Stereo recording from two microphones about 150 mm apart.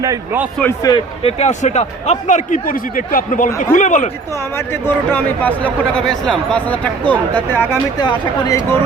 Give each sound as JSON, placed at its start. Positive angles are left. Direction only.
{"t": 0.8, "sound": "speech", "side_deg": 25}
{"t": 1.2, "sound": "speech", "side_deg": 45}
{"t": 4.5, "sound": "speech", "side_deg": 15}
{"t": 7.9, "sound": "speech", "side_deg": 30}